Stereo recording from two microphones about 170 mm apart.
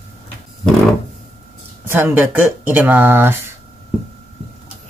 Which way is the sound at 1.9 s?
10° right (ahead or behind).